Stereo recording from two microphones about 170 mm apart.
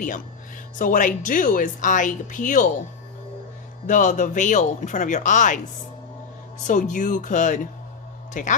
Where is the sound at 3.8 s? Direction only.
50° left (ahead or behind).